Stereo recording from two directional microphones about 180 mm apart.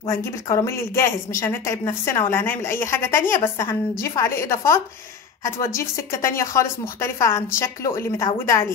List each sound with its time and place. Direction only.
0.1 s speech: 15° left (ahead or behind)